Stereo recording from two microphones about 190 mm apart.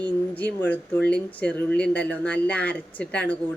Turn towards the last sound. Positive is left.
turn(degrees=5)  # may be behind; listen again after turning